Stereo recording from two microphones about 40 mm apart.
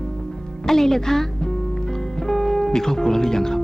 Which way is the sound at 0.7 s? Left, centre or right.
Centre.